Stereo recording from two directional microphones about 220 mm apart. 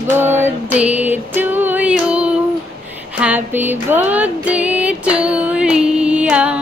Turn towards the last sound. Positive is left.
turn(degrees=-5)  # may be behind; listen again after turning